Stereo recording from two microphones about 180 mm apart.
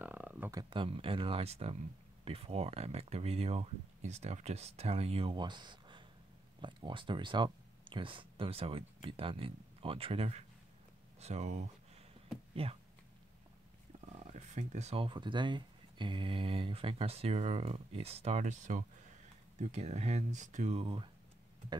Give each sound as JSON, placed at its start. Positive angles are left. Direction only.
{"t": 0.0, "sound": "a sound", "side_deg": -10}
{"t": 0.6, "sound": "speech", "side_deg": -25}
{"t": 14.0, "sound": "speech", "side_deg": -40}
{"t": 20.8, "sound": "speech", "side_deg": -30}